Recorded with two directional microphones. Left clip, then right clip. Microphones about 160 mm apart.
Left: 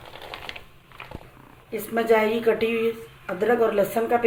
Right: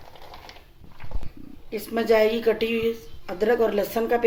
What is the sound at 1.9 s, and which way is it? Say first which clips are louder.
Speech: even; 90° right.